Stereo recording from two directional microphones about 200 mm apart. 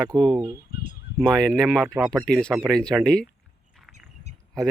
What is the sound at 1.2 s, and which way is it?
Speech, centre (ahead or behind).